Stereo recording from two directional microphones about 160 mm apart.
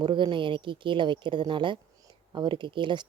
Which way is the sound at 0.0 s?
30° right (ahead or behind).